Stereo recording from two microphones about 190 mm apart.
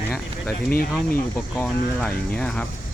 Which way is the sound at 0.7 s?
50° left (ahead or behind).